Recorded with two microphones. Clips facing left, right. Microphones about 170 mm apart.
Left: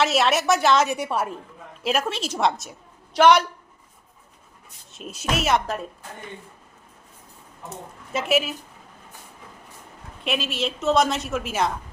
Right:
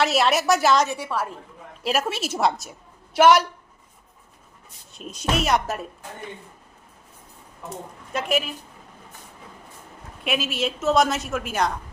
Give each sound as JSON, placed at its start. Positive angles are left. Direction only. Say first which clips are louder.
{"t": 0.0, "sound": "a woman's voice", "louder": "even", "side_deg": 0}
{"t": 0.9, "sound": "a woman's voice", "louder": "left 2 dB", "side_deg": 20}
{"t": 1.8, "sound": "a woman's voice", "louder": "even", "side_deg": -5}
{"t": 4.9, "sound": "a woman's voice", "louder": "right 1 dB", "side_deg": 5}
{"t": 7.7, "sound": "a woman's voice", "louder": "even", "side_deg": 5}
{"t": 10.2, "sound": "a woman's voice", "louder": "right 1 dB", "side_deg": 0}